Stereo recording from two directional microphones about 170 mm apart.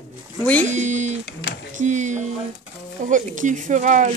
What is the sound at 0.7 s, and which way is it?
Speech, 45° right (ahead or behind).